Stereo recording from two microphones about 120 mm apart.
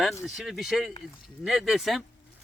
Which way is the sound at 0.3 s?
Centre (ahead or behind).